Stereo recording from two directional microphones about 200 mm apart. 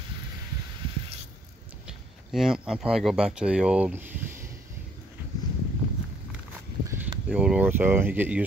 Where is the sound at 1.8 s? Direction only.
Centre (ahead or behind).